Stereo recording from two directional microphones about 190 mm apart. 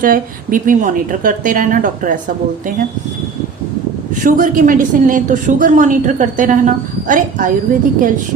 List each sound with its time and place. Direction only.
0.0 s a woman's voice: 45° right (ahead or behind)
4.2 s a woman's voice: 45° right (ahead or behind)